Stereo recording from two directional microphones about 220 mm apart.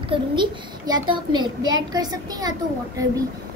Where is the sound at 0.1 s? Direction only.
20° right (ahead or behind).